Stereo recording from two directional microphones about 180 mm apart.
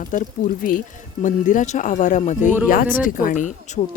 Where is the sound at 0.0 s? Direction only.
50° left (ahead or behind).